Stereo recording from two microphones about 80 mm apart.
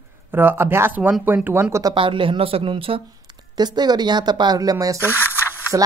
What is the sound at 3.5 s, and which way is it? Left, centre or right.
Speech, right.